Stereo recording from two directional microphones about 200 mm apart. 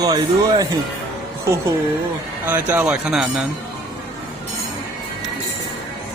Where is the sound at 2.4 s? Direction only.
10° right (ahead or behind).